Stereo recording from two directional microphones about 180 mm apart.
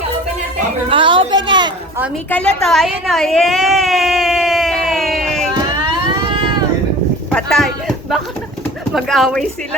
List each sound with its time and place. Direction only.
0.9 s a woman's voice: 30° right (ahead or behind)
2.3 s a woman's voice: 5° left (ahead or behind)
2.6 s a sound: centre (ahead or behind)
7.3 s speech: centre (ahead or behind)